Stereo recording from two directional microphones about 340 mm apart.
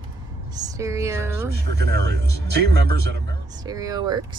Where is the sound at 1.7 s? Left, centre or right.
Right.